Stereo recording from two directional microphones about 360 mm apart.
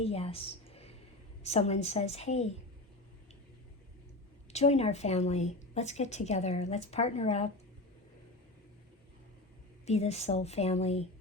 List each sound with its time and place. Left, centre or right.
0.0 s a sound: centre
1.5 s a woman's voice: centre
4.5 s a woman's voice: centre
9.8 s a woman's voice: centre